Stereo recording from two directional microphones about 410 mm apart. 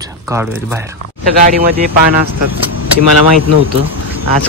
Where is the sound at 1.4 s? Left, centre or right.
Right.